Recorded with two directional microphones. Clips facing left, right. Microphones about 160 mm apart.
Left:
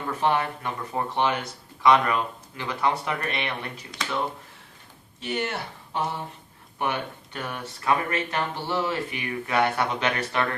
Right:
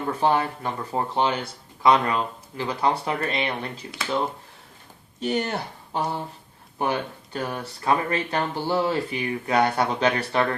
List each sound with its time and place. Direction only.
0.2 s speech: 30° right (ahead or behind)
5.2 s speech: 40° right (ahead or behind)